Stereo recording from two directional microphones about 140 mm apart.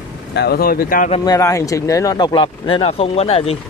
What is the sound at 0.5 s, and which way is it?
Speech, 90° left.